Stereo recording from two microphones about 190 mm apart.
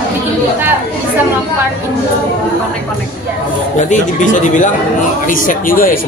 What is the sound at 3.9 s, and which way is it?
Speech, 40° left (ahead or behind).